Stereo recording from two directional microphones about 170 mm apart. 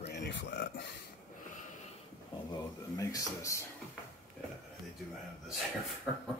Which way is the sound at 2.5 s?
20° left (ahead or behind).